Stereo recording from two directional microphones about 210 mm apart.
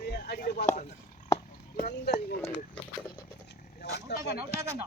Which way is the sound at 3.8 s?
50° left (ahead or behind).